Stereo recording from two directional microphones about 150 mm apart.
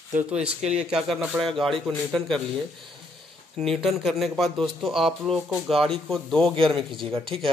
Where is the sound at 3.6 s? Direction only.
Centre (ahead or behind).